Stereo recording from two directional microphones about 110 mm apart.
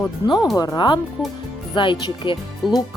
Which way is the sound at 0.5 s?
35° left (ahead or behind).